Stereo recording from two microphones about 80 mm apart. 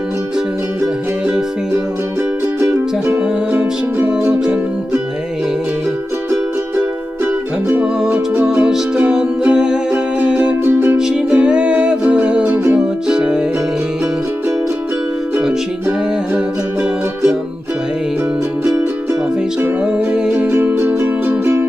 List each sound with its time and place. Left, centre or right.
3.1 s music: centre
7.7 s music: centre
10.6 s music: right
11.0 s music: centre
19.8 s music: centre
20.7 s music: right